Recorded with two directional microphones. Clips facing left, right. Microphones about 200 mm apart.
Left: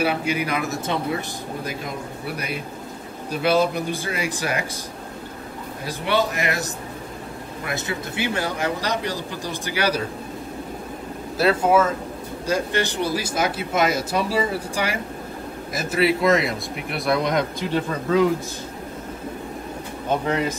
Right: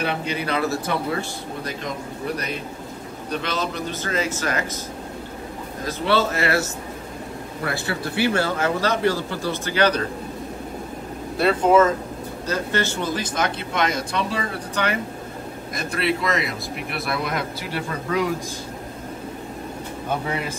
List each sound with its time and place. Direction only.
0.0 s speech: 10° left (ahead or behind)
2.2 s speech: 10° left (ahead or behind)
5.9 s speech: 15° left (ahead or behind)
7.6 s speech: 20° left (ahead or behind)
11.3 s speech: 5° left (ahead or behind)
20.1 s speech: 10° right (ahead or behind)